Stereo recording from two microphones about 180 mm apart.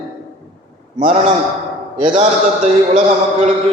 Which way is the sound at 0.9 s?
45° right (ahead or behind).